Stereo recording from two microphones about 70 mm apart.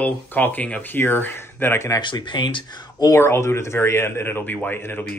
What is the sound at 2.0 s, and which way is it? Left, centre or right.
Speech, left.